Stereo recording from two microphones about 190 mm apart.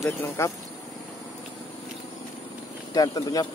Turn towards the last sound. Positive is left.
turn(degrees=20)  # may be behind; listen again after turning